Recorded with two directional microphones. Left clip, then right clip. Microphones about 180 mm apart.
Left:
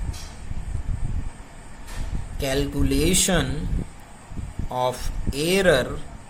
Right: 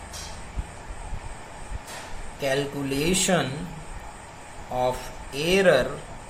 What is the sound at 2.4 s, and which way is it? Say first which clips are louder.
Speech: left 1 dB; 50° left (ahead or behind).